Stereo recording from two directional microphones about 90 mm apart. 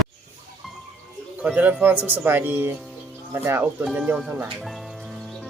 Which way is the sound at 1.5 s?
15° right (ahead or behind).